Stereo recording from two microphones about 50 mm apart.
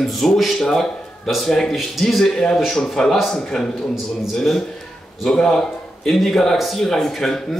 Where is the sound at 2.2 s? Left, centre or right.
Centre.